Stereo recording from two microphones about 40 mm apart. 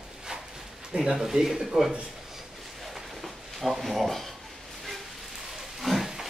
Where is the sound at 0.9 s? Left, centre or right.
Centre.